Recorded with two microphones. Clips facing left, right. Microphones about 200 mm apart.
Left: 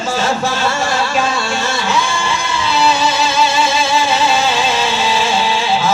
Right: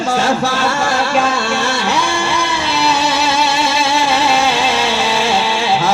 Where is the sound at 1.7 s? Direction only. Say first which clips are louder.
Right 1 dB; 65° right (ahead or behind).